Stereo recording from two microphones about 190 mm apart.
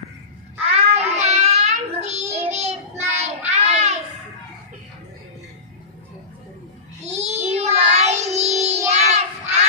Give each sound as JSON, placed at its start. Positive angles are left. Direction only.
{"t": 0.6, "sound": "child singing", "side_deg": -30}
{"t": 7.0, "sound": "child singing", "side_deg": -35}